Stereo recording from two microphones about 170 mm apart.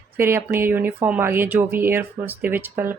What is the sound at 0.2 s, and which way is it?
A woman's voice, 15° right (ahead or behind).